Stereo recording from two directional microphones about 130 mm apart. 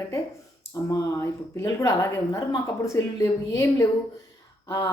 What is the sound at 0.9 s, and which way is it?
A woman's voice, 25° left (ahead or behind).